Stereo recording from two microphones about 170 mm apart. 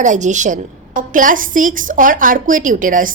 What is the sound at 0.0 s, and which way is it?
A woman's voice, 45° right (ahead or behind).